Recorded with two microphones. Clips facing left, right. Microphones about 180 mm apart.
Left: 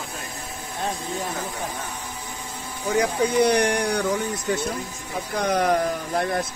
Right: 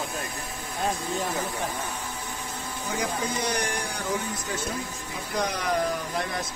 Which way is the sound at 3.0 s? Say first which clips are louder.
Left 10 dB; 65° left (ahead or behind).